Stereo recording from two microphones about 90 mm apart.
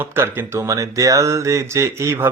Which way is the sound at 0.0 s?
25° right (ahead or behind).